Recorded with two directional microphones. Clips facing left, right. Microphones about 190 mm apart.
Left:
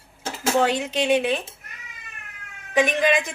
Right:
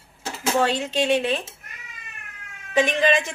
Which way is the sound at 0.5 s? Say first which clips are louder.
Even; 15° left (ahead or behind).